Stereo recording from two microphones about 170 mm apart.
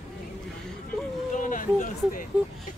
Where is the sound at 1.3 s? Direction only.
50° left (ahead or behind).